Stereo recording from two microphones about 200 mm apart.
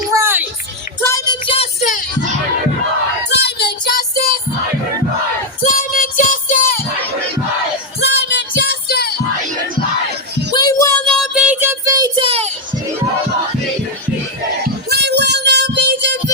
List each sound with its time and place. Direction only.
0.1 s a sound: 15° right (ahead or behind)
1.0 s a sound: 20° left (ahead or behind)
3.2 s child singing: 55° left (ahead or behind)
5.6 s music: 40° left (ahead or behind)
8.0 s music: 60° left (ahead or behind)
10.5 s music: 20° left (ahead or behind)
11.0 s child singing: centre (ahead or behind); by 12.5 s 30° right (ahead or behind)
14.8 s music: 55° right (ahead or behind)